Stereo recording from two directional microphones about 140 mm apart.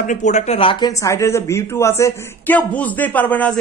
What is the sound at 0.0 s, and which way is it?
Speech, 60° left (ahead or behind).